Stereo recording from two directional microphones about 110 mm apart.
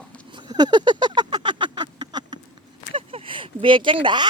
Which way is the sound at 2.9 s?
50° right (ahead or behind).